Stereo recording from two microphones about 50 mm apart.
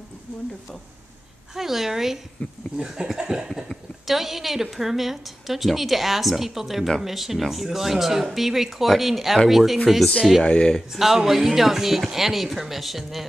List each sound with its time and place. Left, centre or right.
1.5 s a sound: centre
3.6 s a woman's voice: centre
10.4 s speech: centre
10.9 s a woman's voice: centre